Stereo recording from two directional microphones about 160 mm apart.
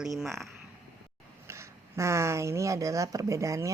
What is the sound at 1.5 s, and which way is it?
Speech, 15° right (ahead or behind).